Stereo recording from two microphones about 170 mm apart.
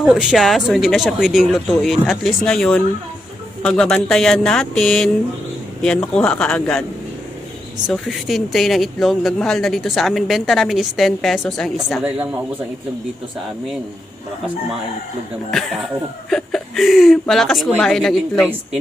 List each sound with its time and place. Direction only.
0.0 s speech: 5° right (ahead or behind)
7.9 s speech: centre (ahead or behind)
12.0 s speech: 10° right (ahead or behind)
16.3 s speech: centre (ahead or behind)